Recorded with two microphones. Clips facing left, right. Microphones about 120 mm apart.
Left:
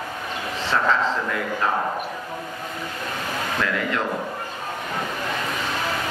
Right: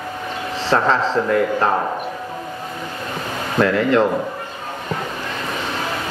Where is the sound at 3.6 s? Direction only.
30° right (ahead or behind).